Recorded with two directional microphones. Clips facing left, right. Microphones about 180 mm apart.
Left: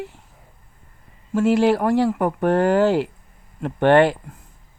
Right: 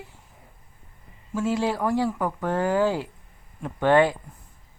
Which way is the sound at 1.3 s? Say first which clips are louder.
Left 8 dB; 70° left (ahead or behind).